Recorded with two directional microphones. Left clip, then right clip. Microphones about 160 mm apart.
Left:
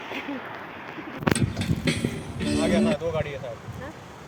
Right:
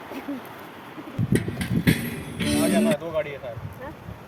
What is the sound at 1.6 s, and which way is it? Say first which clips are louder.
Vehicle: right 2 dB; 30° right (ahead or behind).